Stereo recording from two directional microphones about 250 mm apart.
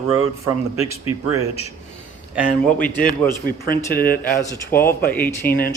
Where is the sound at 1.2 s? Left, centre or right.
Centre.